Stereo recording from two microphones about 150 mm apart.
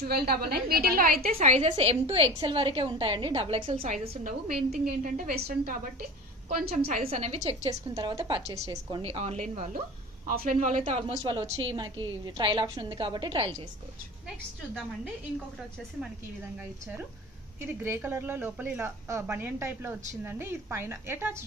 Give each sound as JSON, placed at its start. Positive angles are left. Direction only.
{"t": 0.0, "sound": "a woman's voice", "side_deg": -90}
{"t": 1.7, "sound": "a woman's voice", "side_deg": -40}
{"t": 6.5, "sound": "a woman's voice", "side_deg": -85}
{"t": 7.0, "sound": "a woman's voice", "side_deg": -45}
{"t": 7.6, "sound": "a woman's voice", "side_deg": -30}
{"t": 10.2, "sound": "a woman's voice", "side_deg": -70}
{"t": 17.6, "sound": "speech", "side_deg": -15}